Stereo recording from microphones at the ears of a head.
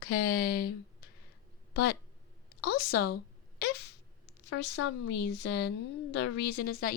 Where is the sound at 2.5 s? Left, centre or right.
Left.